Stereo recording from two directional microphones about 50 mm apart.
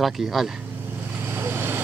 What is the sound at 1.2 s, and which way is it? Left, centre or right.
Vehicle, right.